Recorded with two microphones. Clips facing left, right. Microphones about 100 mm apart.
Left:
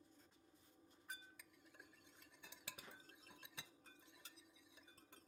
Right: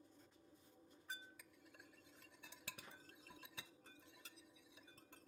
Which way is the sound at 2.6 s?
Centre (ahead or behind).